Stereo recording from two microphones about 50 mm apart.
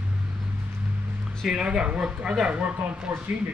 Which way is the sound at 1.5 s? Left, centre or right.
Centre.